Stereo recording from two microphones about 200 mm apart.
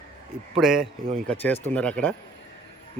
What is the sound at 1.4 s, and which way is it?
Speech, 10° left (ahead or behind).